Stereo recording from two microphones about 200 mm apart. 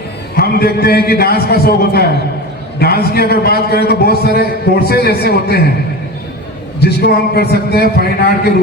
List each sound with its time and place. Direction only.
0.3 s a man's voice: 50° left (ahead or behind)
6.7 s a man's voice: 55° left (ahead or behind)